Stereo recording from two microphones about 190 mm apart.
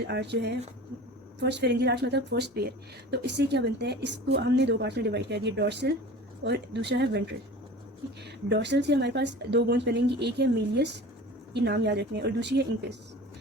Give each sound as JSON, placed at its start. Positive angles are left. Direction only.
{"t": 0.1, "sound": "speech", "side_deg": -65}